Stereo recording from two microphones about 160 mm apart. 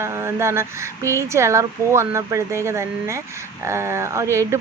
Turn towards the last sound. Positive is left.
turn(degrees=-20)  # may be behind; listen again after turning